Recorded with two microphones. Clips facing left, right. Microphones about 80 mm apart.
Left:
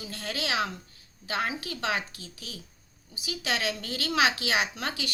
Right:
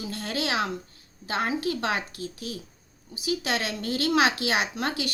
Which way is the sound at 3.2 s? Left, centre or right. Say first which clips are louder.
Right 4 dB; right.